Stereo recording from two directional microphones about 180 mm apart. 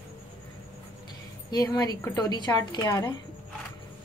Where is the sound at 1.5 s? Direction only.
20° left (ahead or behind).